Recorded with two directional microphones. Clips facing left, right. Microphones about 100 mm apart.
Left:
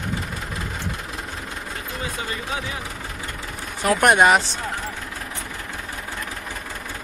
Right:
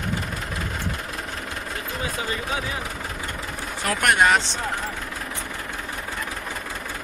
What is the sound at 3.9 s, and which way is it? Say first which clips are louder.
Speech: left 4 dB; 20° left (ahead or behind).